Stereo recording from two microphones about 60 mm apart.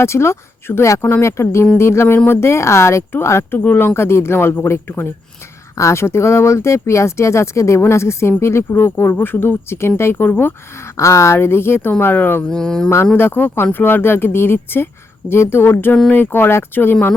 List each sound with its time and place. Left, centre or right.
0.0 s speech: left
3.6 s speech: left
5.7 s speech: left
10.8 s speech: left
11.3 s speech: left
12.5 s speech: centre
13.1 s speech: left